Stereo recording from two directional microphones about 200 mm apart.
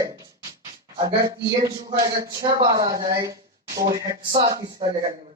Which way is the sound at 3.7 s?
45° right (ahead or behind).